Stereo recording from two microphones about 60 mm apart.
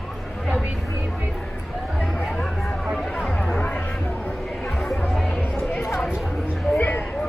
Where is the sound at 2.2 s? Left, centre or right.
Centre.